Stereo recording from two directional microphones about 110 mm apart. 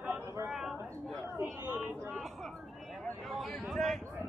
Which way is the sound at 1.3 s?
25° right (ahead or behind).